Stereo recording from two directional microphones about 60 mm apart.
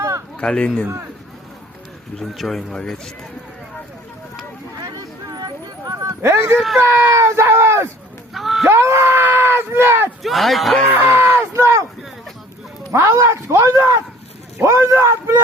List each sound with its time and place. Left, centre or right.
0.3 s speech: centre
2.1 s speech: centre
2.7 s speech: centre
4.8 s a sound: right
5.8 s a sound: right
6.2 s speech: right
6.9 s speech: right
7.2 s speech: right
8.3 s honk: centre
8.6 s speech: right
10.2 s speech: centre
10.9 s a sound: right
11.5 s a sound: right
12.9 s speech: right